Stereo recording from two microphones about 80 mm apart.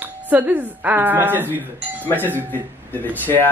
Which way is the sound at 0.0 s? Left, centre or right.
Right.